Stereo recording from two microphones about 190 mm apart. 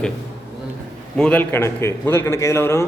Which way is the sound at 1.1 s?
5° left (ahead or behind).